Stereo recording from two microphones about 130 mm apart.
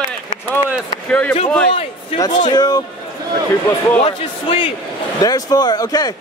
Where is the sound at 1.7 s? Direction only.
50° left (ahead or behind).